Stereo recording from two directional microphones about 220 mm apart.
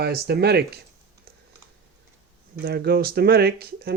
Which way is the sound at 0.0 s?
45° right (ahead or behind).